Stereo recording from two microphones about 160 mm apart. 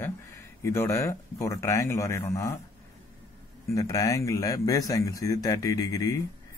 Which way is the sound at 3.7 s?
20° left (ahead or behind).